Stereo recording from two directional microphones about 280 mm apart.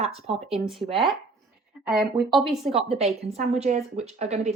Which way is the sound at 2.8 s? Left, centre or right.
Right.